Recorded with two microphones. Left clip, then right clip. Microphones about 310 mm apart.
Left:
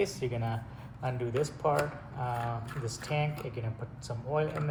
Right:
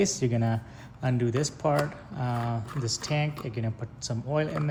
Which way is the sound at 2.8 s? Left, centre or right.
Right.